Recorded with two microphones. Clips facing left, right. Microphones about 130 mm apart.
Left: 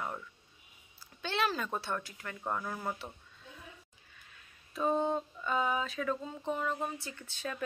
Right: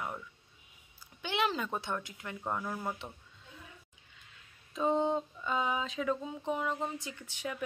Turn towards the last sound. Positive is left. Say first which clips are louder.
# right 1 dB
turn(degrees=-15)  # may be behind; listen again after turning